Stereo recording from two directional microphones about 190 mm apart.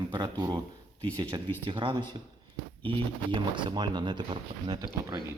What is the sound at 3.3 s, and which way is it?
Speech, 25° right (ahead or behind).